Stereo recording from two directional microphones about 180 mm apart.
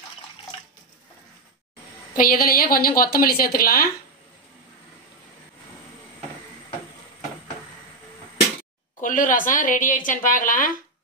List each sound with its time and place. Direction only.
2.1 s a woman's voice: 50° left (ahead or behind)
9.0 s a woman's voice: 45° left (ahead or behind)